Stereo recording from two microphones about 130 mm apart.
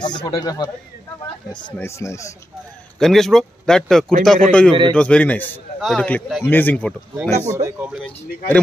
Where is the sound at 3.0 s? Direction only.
Centre (ahead or behind).